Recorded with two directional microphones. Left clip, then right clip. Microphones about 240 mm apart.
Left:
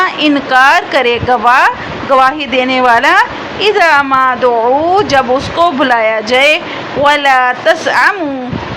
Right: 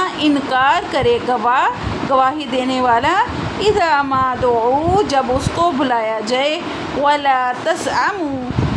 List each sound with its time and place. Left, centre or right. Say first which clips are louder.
0.0 s a woman's voice: left 6 dB; centre